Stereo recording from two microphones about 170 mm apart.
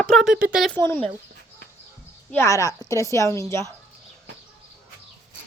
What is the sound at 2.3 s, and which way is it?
A woman's voice, 15° left (ahead or behind).